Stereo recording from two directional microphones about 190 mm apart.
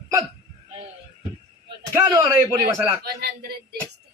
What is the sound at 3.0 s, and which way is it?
Speech, 55° right (ahead or behind).